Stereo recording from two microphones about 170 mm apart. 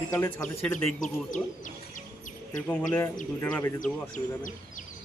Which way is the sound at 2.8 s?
15° left (ahead or behind).